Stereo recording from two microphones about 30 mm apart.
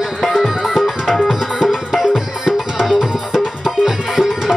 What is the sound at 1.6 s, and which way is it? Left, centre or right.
Music, centre.